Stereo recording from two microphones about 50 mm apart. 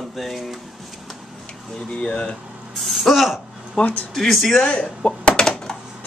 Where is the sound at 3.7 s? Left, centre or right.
Left.